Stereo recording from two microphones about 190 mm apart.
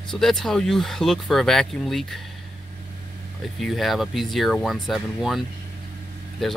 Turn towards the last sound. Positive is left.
turn(degrees=0)  # may be behind; listen again after turning